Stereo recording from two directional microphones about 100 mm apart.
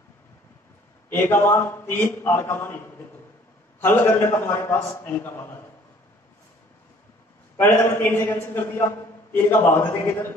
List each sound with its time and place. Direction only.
1.1 s a man's voice: 20° left (ahead or behind)
7.5 s a man's voice: 20° left (ahead or behind)